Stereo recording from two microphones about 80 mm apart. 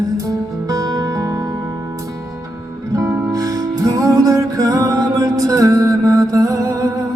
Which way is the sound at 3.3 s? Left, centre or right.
Right.